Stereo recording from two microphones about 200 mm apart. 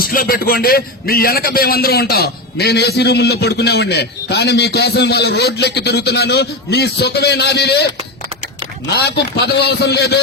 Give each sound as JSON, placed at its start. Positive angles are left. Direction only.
{"t": 0.0, "sound": "a man's voice", "side_deg": 45}
{"t": 8.9, "sound": "a man's voice", "side_deg": 55}